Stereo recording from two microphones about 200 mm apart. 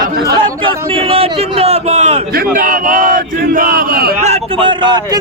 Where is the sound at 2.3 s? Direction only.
45° right (ahead or behind).